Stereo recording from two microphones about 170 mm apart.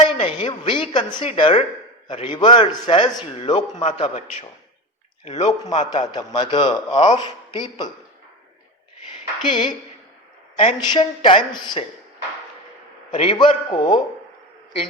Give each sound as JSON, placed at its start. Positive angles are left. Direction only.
{"t": 0.1, "sound": "a man's voice", "side_deg": 35}
{"t": 5.9, "sound": "a man's voice", "side_deg": 25}
{"t": 6.9, "sound": "speech", "side_deg": 40}
{"t": 7.2, "sound": "a man's voice", "side_deg": 25}
{"t": 9.5, "sound": "a man's voice", "side_deg": 30}
{"t": 13.1, "sound": "a man's voice", "side_deg": 30}